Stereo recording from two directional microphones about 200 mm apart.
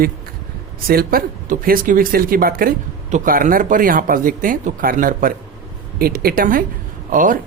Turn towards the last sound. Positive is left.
turn(degrees=-40)  # may be behind; listen again after turning